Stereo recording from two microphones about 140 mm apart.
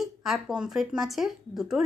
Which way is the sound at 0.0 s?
Centre (ahead or behind).